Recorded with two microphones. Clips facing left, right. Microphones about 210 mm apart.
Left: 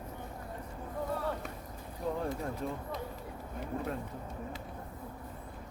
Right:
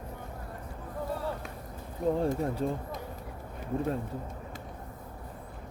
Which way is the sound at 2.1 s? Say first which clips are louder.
Right 7 dB; 30° right (ahead or behind).